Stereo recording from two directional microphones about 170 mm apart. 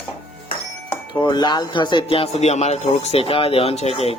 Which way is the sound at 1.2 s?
25° left (ahead or behind).